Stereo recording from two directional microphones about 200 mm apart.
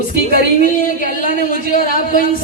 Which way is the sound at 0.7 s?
45° left (ahead or behind).